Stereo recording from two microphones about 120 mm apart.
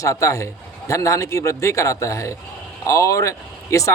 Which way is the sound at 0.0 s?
25° left (ahead or behind).